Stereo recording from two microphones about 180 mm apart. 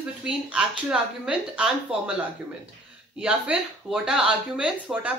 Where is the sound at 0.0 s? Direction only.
5° right (ahead or behind).